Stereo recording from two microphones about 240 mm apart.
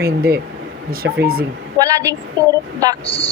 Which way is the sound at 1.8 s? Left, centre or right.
Centre.